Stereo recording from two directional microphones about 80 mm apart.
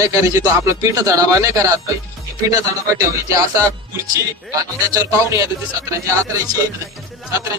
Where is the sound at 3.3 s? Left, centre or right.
Right.